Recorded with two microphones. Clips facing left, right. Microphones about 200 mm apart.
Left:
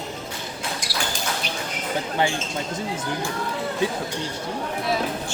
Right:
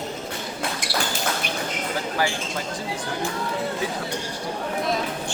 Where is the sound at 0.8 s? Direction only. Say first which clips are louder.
Right 5 dB; 60° right (ahead or behind).